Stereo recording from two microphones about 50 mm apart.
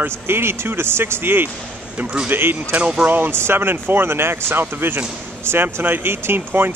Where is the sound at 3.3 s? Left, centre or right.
Right.